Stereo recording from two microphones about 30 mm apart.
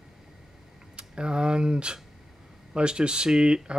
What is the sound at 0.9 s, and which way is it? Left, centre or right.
Speech, right.